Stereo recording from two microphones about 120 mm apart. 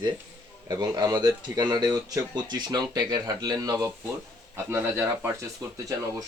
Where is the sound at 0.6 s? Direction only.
30° right (ahead or behind).